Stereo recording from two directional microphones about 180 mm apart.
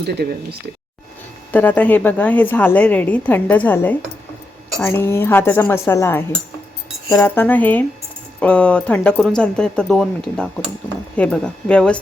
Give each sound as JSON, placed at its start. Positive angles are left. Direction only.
{"t": 0.0, "sound": "speech", "side_deg": -65}
{"t": 1.5, "sound": "a woman's voice", "side_deg": 10}